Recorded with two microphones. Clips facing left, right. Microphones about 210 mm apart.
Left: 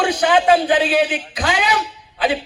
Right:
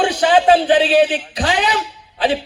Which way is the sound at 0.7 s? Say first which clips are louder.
Right 3 dB; 35° right (ahead or behind).